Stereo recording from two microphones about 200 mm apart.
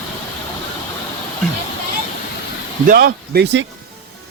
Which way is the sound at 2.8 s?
45° right (ahead or behind).